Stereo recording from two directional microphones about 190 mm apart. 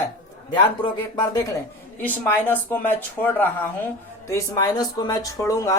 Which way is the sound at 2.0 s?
10° left (ahead or behind).